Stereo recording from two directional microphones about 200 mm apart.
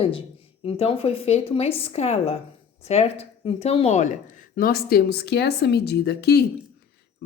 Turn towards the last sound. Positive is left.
turn(degrees=55)  # may be behind; listen again after turning